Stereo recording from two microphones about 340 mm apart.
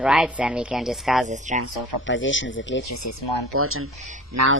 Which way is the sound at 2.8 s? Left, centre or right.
Left.